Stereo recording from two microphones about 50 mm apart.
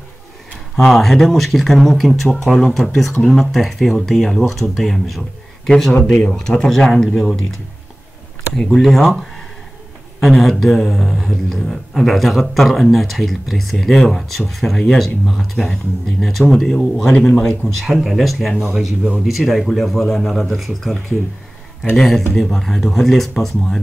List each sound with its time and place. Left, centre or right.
0.7 s speech: centre
6.0 s speech: centre
8.6 s speech: centre
17.3 s speech: centre
17.7 s speech: centre